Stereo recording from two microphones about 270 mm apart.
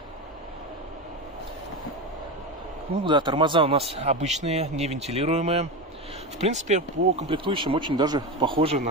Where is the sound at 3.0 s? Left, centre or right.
Centre.